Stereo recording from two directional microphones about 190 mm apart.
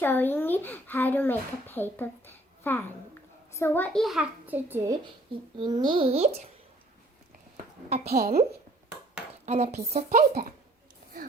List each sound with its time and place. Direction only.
0.0 s a child's voice: 10° left (ahead or behind); by 6.3 s 35° right (ahead or behind)
7.5 s a sound: 35° right (ahead or behind)
8.1 s a woman's voice: 55° right (ahead or behind)
9.5 s speech: 35° right (ahead or behind)